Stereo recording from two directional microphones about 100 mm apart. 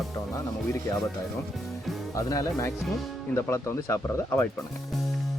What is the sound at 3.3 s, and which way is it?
Speech, 25° left (ahead or behind).